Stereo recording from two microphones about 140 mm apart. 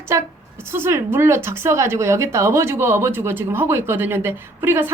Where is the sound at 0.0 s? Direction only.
20° right (ahead or behind).